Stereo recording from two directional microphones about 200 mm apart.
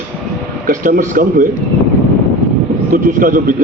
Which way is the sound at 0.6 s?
45° right (ahead or behind).